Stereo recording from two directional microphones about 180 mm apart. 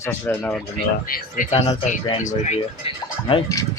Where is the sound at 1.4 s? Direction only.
50° left (ahead or behind).